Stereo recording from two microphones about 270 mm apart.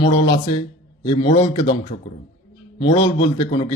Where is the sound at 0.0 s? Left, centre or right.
Centre.